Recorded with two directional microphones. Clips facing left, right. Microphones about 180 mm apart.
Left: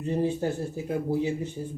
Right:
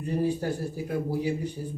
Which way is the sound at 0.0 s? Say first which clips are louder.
Left 1 dB; 20° left (ahead or behind).